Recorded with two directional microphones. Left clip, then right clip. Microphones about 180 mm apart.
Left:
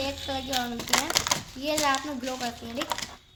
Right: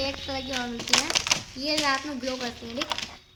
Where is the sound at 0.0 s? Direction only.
45° left (ahead or behind).